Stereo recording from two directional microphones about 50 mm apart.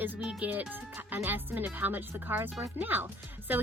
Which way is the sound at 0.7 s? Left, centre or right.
Right.